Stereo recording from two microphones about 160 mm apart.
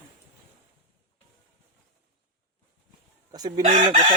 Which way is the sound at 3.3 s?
25° right (ahead or behind).